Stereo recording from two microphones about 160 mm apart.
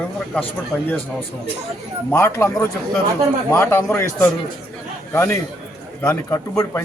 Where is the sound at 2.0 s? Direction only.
15° left (ahead or behind).